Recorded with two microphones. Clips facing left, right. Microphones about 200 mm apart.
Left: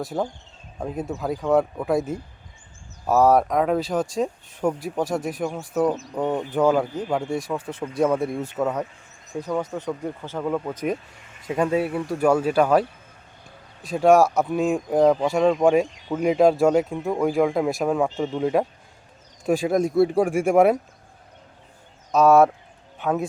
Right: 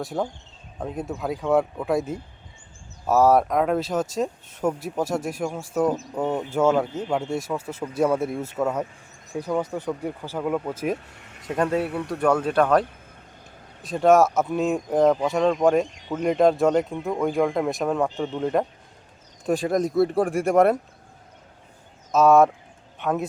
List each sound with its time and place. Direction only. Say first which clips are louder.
0.0 s speech: left 1 dB; centre (ahead or behind)
7.7 s speech: left 1 dB; 5° right (ahead or behind)
11.2 s a sound: right 2 dB; 65° right (ahead or behind)
11.4 s speech: left 1 dB; 5° left (ahead or behind)
13.8 s speech: left 1 dB; centre (ahead or behind)
22.1 s speech: left 1 dB; centre (ahead or behind)